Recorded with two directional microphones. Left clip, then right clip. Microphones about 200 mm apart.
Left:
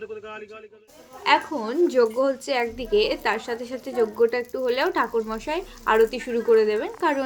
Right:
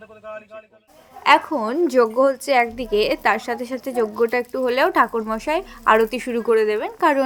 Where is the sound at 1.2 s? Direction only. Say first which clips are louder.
Right 5 dB; 35° right (ahead or behind).